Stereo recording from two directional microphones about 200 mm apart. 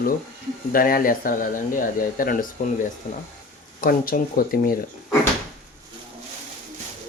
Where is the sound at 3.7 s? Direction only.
45° left (ahead or behind).